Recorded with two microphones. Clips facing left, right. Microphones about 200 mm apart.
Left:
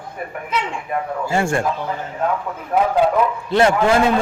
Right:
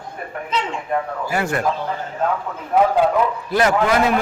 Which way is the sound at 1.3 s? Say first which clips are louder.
Left 3 dB; 25° left (ahead or behind).